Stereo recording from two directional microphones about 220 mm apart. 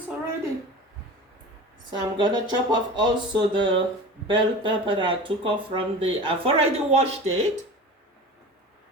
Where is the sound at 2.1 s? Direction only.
20° right (ahead or behind).